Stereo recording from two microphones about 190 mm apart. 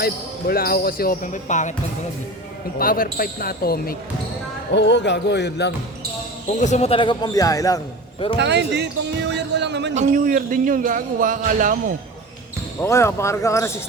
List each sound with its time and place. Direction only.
0.0 s speech: 50° left (ahead or behind)
2.7 s speech: 50° left (ahead or behind)
4.7 s speech: 65° left (ahead or behind)
6.6 s speech: 35° left (ahead or behind); by 7.8 s 20° left (ahead or behind)
8.4 s speech: 65° right (ahead or behind)
9.9 s a man's voice: 40° right (ahead or behind)
12.8 s speech: 15° left (ahead or behind)